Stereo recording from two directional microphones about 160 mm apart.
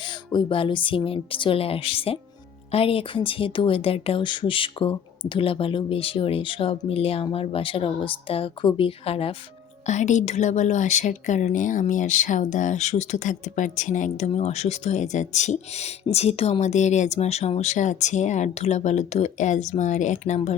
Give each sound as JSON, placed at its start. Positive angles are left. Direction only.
{"t": 0.0, "sound": "speech", "side_deg": 30}
{"t": 9.8, "sound": "a woman's voice", "side_deg": 50}